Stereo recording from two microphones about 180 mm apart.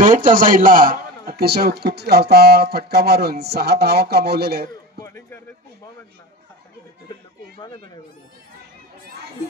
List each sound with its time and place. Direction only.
0.0 s a man's voice: 45° right (ahead or behind); by 4.6 s 60° right (ahead or behind)
5.0 s music: 15° left (ahead or behind)